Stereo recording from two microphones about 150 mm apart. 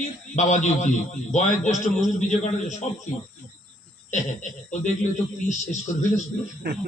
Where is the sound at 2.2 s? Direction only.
55° left (ahead or behind).